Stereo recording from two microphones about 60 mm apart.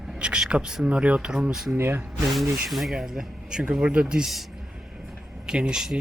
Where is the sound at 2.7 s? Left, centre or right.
Centre.